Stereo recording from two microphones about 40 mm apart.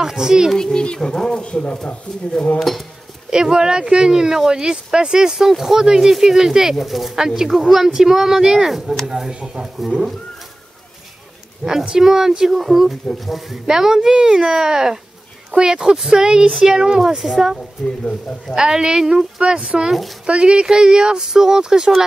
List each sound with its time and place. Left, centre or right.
0.0 s speech: centre
0.6 s speech: centre
2.6 s speech: centre
3.3 s speech: centre
6.8 s speech: centre; by 9.7 s right
11.8 s speech: centre
17.0 s speech: centre
19.9 s speech: centre
20.2 s speech: right